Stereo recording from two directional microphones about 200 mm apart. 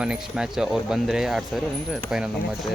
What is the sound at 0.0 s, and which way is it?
Speech, 5° right (ahead or behind).